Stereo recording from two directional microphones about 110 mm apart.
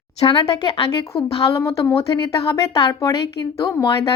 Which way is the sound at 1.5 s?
25° left (ahead or behind).